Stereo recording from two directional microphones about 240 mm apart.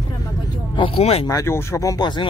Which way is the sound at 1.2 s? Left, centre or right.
Centre.